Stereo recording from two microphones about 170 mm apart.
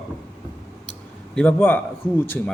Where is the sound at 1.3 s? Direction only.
5° left (ahead or behind).